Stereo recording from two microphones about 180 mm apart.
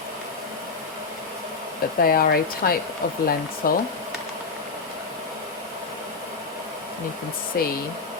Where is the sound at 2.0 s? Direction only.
55° left (ahead or behind).